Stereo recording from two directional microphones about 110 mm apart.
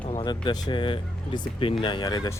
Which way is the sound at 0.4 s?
40° left (ahead or behind).